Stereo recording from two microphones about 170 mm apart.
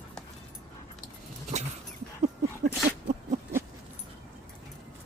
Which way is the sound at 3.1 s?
40° right (ahead or behind).